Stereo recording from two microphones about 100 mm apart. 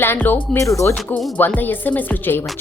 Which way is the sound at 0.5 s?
30° left (ahead or behind).